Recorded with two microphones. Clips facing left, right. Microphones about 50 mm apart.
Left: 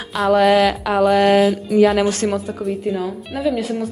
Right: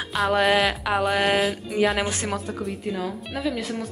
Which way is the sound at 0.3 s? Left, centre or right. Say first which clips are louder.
Left 8 dB; centre.